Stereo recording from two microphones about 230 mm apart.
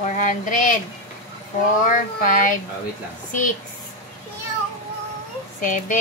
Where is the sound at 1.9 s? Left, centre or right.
Left.